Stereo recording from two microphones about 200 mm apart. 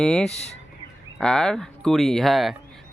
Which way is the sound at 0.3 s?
35° left (ahead or behind).